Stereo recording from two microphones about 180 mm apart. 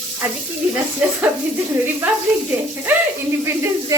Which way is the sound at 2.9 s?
10° right (ahead or behind).